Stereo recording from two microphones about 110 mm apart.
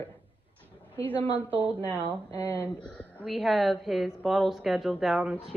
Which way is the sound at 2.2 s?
30° left (ahead or behind).